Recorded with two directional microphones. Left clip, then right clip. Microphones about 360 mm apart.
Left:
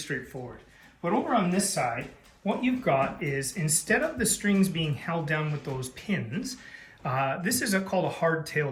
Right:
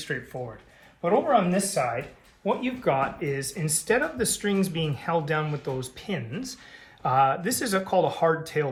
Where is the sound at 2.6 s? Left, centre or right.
Centre.